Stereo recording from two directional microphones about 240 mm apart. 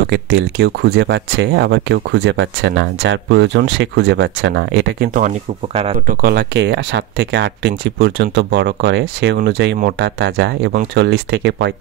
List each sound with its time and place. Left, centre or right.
0.0 s speech: right